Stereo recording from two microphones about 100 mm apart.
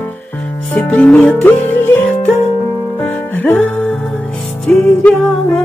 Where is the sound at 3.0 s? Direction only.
20° left (ahead or behind).